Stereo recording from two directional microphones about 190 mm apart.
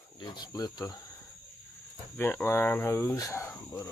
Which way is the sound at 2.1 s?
10° left (ahead or behind).